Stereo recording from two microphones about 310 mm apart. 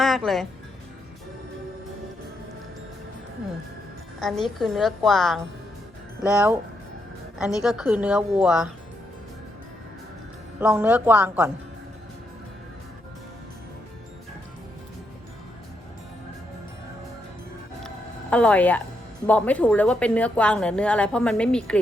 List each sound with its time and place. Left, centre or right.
0.3 s a woman's voice: centre
4.2 s a woman's voice: centre
7.6 s a woman's voice: centre
10.6 s a woman's voice: centre
17.8 s a sound: centre
19.3 s a woman's voice: centre